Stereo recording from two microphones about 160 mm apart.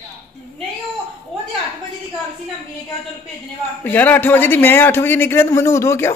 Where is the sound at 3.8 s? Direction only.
10° left (ahead or behind).